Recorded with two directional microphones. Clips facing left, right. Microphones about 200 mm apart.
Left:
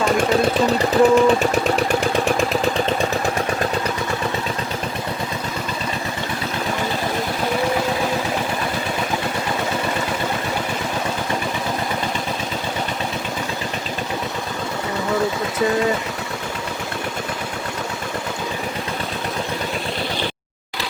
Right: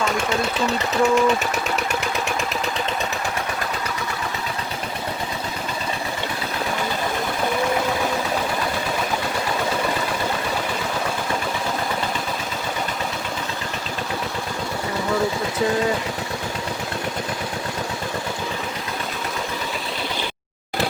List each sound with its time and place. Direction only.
0.0 s speech: 35° left (ahead or behind)